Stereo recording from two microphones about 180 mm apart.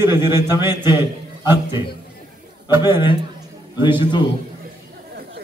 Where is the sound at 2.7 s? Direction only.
15° right (ahead or behind).